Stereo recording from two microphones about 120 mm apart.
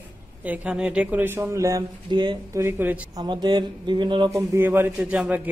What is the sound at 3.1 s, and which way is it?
Speech, 35° right (ahead or behind).